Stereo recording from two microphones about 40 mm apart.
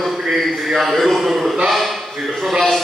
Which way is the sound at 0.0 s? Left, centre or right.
Centre.